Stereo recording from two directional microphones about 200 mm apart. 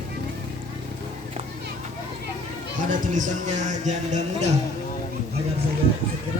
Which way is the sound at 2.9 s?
40° right (ahead or behind).